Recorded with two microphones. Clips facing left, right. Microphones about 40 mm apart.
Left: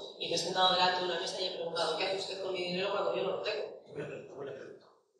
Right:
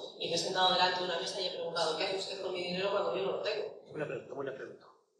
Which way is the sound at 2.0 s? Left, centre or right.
Centre.